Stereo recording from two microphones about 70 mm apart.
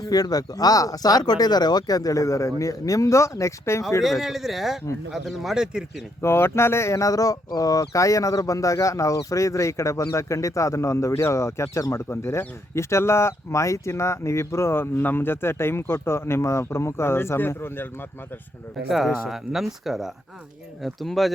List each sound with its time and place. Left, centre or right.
0.0 s speech: left
4.0 s speech: centre
6.2 s speech: left
12.0 s speech: left
18.9 s speech: centre